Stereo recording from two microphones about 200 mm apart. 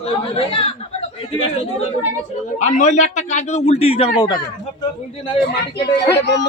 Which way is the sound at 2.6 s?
35° left (ahead or behind).